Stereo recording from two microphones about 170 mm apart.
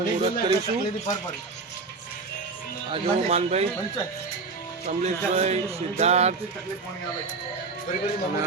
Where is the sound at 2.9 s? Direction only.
40° right (ahead or behind).